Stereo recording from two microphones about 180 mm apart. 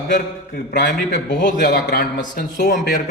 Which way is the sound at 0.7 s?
45° left (ahead or behind).